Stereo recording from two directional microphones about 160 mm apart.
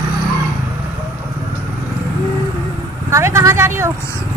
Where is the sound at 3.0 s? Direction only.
15° right (ahead or behind).